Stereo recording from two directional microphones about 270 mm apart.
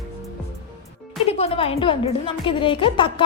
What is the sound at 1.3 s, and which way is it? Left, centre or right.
A woman's voice, left.